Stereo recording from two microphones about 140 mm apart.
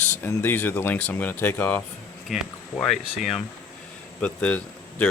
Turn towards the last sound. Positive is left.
turn(degrees=10)  # may be behind; listen again after turning